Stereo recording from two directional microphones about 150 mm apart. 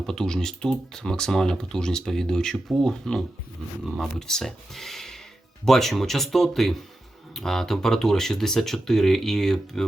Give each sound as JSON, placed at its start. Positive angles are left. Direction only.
{"t": 0.0, "sound": "speech", "side_deg": 5}